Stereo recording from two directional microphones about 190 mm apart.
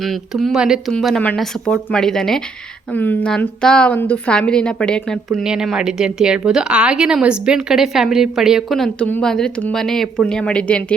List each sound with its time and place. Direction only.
0.0 s a woman's voice: centre (ahead or behind)